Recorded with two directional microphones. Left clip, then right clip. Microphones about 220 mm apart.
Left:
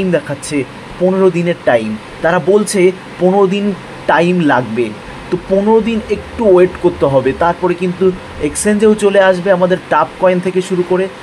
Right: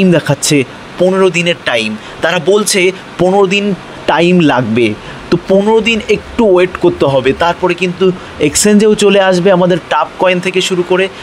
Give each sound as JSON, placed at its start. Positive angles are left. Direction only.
{"t": 0.1, "sound": "speech", "side_deg": -45}